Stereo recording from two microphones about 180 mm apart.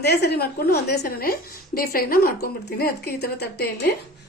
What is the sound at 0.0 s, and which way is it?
A woman's voice, 65° left (ahead or behind).